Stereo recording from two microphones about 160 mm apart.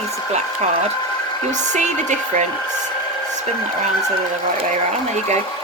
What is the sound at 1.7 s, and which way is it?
Speech, 50° right (ahead or behind).